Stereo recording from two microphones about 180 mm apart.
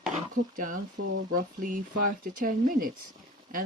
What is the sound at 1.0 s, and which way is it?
Speech, 60° right (ahead or behind).